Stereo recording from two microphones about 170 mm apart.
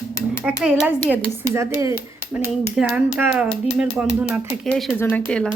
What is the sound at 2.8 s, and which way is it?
A woman's voice, 5° right (ahead or behind).